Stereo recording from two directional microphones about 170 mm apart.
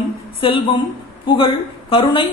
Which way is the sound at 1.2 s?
30° left (ahead or behind).